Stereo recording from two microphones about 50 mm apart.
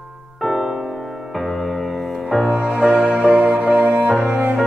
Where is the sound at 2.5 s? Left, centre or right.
Centre.